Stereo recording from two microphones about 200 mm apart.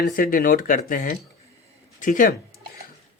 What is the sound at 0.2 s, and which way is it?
Speech, 45° left (ahead or behind).